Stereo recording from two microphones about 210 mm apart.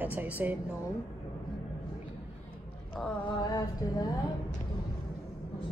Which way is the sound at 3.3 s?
20° left (ahead or behind).